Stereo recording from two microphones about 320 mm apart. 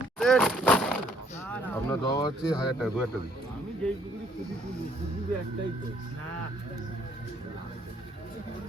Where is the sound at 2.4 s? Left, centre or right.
Centre.